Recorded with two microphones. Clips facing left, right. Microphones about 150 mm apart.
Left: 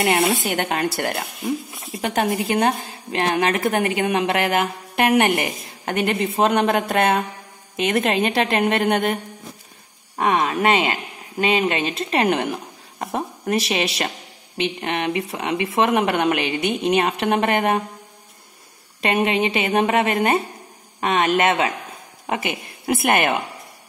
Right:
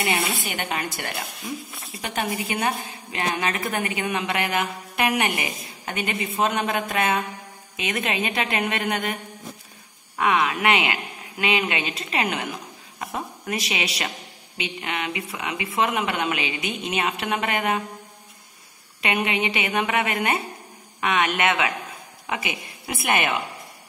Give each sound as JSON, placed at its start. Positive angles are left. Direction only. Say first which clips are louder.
{"t": 0.0, "sound": "a woman's voice", "louder": "left 7 dB", "side_deg": 65}
{"t": 2.1, "sound": "a woman's voice", "louder": "left 6 dB", "side_deg": 65}
{"t": 10.1, "sound": "speech", "louder": "left 2 dB", "side_deg": 40}
{"t": 12.3, "sound": "a woman's voice", "louder": "left 8 dB", "side_deg": 60}
{"t": 13.0, "sound": "a sound", "louder": "left 5 dB", "side_deg": 50}
{"t": 14.8, "sound": "speech", "louder": "left 4 dB", "side_deg": 45}
{"t": 15.8, "sound": "a woman's voice", "louder": "left 5 dB", "side_deg": 55}
{"t": 19.0, "sound": "a woman's voice", "louder": "left 5 dB", "side_deg": 45}